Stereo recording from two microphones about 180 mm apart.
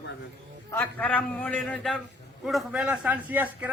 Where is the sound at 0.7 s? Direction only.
10° left (ahead or behind); by 3.7 s 10° right (ahead or behind).